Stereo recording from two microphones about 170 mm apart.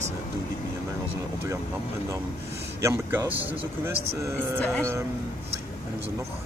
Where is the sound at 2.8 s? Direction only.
15° right (ahead or behind).